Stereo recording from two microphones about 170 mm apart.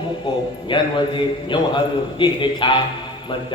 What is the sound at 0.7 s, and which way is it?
A man's voice, 30° left (ahead or behind).